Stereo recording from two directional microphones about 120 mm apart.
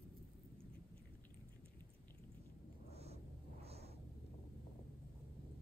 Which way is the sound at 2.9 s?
60° right (ahead or behind).